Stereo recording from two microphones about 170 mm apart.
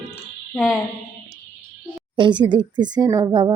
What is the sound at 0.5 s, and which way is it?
Speech, centre (ahead or behind).